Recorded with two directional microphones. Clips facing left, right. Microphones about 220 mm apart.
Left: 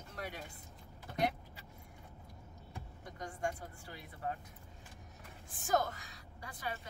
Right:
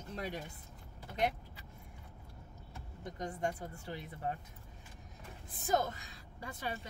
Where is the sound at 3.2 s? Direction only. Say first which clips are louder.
Right 2 dB; 20° right (ahead or behind).